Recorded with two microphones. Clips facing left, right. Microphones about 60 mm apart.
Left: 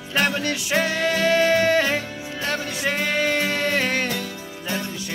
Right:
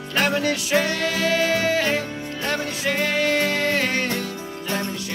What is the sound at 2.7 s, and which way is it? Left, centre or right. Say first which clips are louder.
Music: right 1 dB; centre.